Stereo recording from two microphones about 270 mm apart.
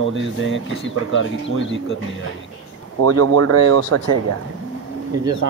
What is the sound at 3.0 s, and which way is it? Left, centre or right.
Speech, right.